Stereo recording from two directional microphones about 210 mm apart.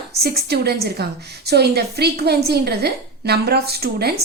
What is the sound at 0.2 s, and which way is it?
A woman's voice, 50° right (ahead or behind).